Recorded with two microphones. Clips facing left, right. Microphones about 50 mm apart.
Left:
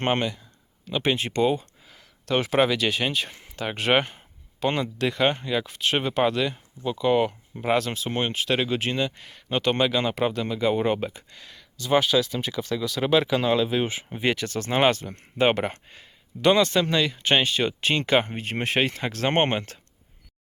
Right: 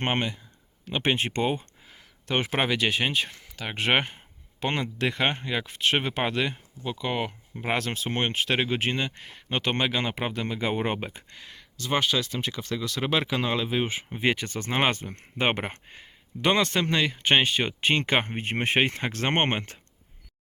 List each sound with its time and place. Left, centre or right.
0.0 s speech: centre
0.9 s a sound: right
2.3 s speech: centre
7.0 s speech: centre
7.8 s speech: right
11.9 s speech: centre
13.0 s speech: centre
14.3 s speech: right
16.6 s speech: right